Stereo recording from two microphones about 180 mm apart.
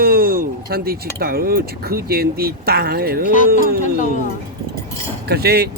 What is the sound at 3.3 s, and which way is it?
Speech, 45° left (ahead or behind).